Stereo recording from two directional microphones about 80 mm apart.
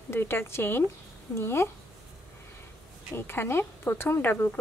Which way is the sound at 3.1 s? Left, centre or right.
Left.